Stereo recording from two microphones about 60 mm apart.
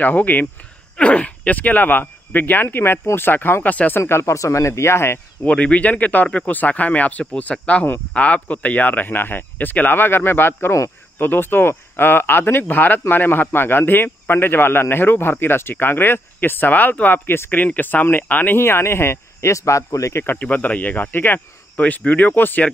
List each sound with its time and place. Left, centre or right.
0.0 s a man's voice: left
4.0 s speech: left
5.4 s a man's voice: left
18.6 s speech: left
20.3 s speech: left